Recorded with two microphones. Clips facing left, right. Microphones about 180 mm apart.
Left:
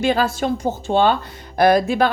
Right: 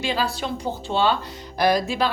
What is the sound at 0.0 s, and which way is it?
Speech, 50° left (ahead or behind).